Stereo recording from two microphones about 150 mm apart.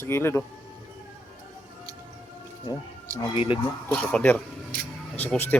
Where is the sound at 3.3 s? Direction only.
40° left (ahead or behind).